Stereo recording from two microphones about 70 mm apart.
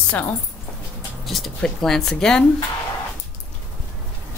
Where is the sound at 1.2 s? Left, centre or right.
Centre.